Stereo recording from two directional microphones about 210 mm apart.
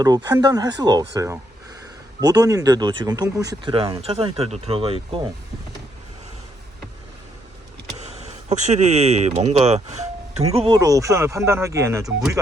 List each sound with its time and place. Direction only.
0.0 s speech: 20° right (ahead or behind)
8.3 s speech: 30° right (ahead or behind)
10.8 s speech: 15° right (ahead or behind)